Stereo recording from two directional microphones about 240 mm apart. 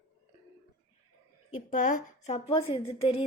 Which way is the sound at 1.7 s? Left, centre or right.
Left.